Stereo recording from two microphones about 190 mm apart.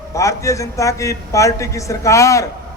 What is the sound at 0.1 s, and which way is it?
A man's voice, 15° left (ahead or behind).